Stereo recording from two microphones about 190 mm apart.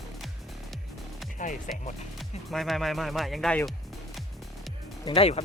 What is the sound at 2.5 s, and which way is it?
Speech, centre (ahead or behind).